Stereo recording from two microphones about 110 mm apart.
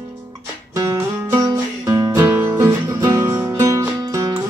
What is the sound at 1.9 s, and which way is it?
Music, 25° right (ahead or behind).